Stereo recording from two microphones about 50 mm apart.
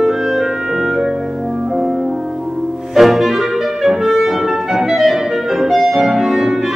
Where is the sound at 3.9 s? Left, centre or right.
Centre.